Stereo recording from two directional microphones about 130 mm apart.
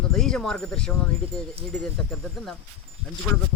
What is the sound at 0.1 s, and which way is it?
Speech, 5° left (ahead or behind).